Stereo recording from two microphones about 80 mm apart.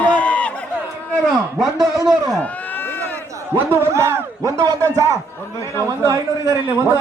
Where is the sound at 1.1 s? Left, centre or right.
Centre.